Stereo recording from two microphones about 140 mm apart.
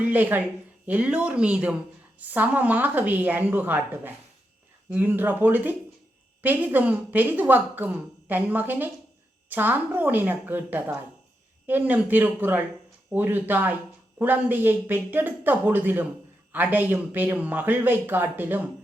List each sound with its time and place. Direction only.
0.0 s a woman's voice: 10° right (ahead or behind)